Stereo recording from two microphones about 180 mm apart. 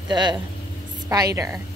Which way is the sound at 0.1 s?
25° right (ahead or behind).